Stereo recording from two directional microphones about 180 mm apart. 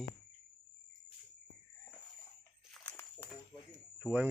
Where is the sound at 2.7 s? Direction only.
5° left (ahead or behind).